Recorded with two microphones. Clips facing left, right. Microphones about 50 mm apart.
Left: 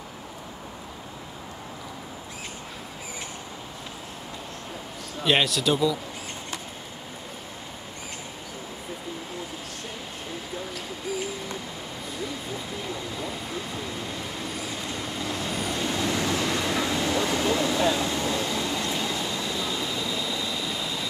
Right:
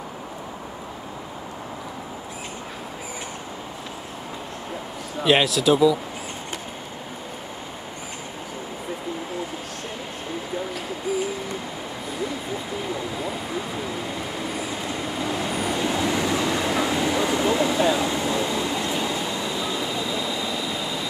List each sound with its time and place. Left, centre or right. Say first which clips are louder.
5.2 s speech: right 4 dB; centre
11.1 s owl: right 6 dB; centre
14.6 s train: right 4 dB; centre